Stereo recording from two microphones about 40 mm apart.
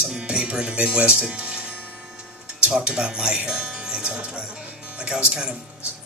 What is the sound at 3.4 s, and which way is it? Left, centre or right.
Music, right.